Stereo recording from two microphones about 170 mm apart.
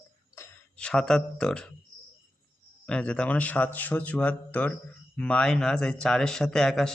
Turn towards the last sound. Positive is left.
turn(degrees=5)  # may be behind; listen again after turning